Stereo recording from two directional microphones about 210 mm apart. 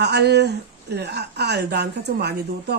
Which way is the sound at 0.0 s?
50° right (ahead or behind).